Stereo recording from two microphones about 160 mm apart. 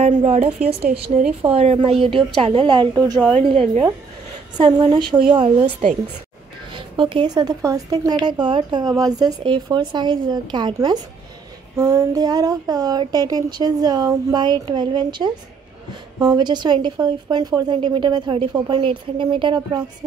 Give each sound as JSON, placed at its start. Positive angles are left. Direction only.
{"t": 0.0, "sound": "a woman's voice", "side_deg": -45}
{"t": 3.2, "sound": "a woman's voice", "side_deg": 5}
{"t": 3.4, "sound": "a woman's voice", "side_deg": -35}